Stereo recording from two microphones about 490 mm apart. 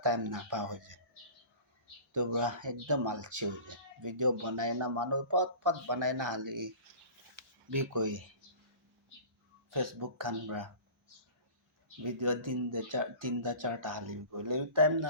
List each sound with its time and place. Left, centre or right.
0.0 s speech: right
2.3 s speech: right
9.7 s speech: right
12.0 s speech: right